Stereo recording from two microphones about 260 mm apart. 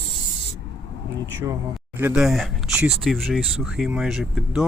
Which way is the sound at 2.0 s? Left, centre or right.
Centre.